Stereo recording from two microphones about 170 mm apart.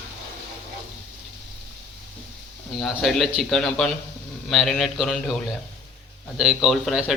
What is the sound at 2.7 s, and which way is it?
Speech, centre (ahead or behind).